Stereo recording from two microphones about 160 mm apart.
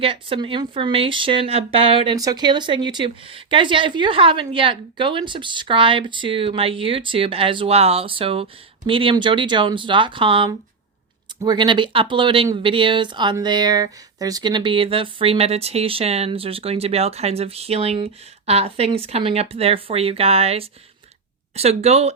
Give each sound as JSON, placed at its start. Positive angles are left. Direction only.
{"t": 0.0, "sound": "speech", "side_deg": -35}
{"t": 2.1, "sound": "speech", "side_deg": -25}